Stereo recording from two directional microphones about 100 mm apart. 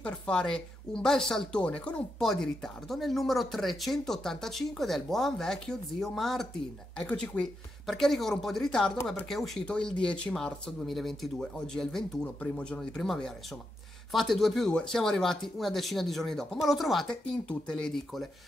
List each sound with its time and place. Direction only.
0.0 s speech: 10° left (ahead or behind)